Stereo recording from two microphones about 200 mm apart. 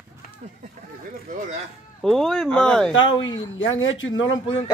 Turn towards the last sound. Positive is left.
turn(degrees=75)  # may be behind; listen again after turning